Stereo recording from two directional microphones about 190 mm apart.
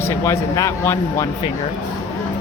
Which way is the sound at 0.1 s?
15° left (ahead or behind).